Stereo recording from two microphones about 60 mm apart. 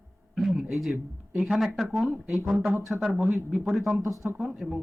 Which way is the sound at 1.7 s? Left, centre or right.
Centre.